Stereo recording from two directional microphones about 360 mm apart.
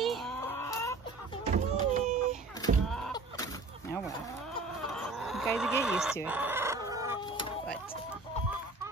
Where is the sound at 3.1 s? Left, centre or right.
Centre.